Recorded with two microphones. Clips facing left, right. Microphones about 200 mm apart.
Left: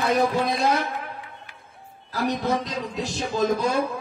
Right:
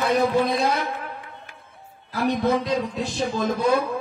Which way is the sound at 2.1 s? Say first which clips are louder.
Right 3 dB; 60° right (ahead or behind).